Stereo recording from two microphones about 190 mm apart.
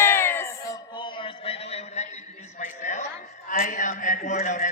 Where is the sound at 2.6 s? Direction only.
40° left (ahead or behind).